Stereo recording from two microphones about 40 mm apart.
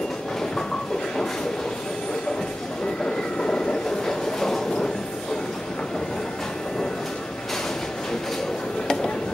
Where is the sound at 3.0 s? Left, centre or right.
Centre.